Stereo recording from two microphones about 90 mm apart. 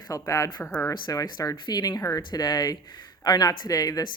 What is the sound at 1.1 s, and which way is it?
Speech, 40° left (ahead or behind).